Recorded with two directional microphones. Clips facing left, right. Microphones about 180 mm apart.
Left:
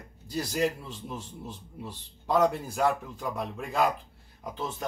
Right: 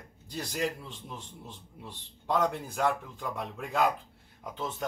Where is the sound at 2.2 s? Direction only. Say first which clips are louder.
Left 4 dB; 5° left (ahead or behind).